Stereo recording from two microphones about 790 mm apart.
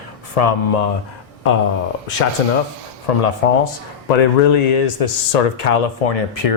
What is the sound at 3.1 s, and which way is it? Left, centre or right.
Speech, left.